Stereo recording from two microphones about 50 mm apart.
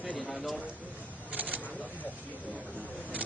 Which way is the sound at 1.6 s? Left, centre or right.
Left.